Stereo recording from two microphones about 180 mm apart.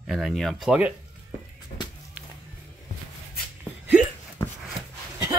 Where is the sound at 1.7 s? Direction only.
50° left (ahead or behind).